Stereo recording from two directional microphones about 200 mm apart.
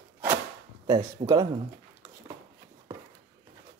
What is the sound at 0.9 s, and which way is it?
Speech, 20° right (ahead or behind).